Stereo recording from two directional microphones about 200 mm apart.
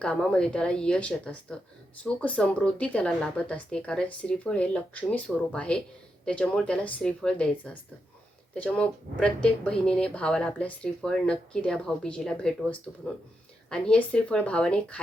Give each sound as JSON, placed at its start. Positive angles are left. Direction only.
{"t": 0.0, "sound": "speech", "side_deg": 5}
{"t": 8.5, "sound": "speech", "side_deg": 5}